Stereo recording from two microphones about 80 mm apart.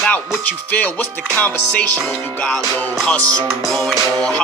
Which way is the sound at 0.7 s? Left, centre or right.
Centre.